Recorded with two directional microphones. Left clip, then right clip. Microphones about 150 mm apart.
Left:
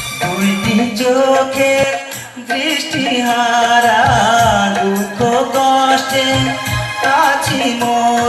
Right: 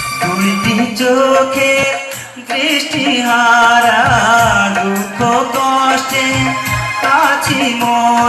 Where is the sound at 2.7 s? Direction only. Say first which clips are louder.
Right 4 dB; 25° right (ahead or behind).